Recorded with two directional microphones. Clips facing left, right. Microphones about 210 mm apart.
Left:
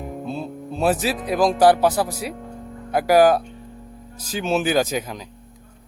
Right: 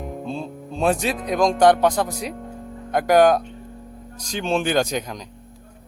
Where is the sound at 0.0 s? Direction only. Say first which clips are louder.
Even; centre (ahead or behind).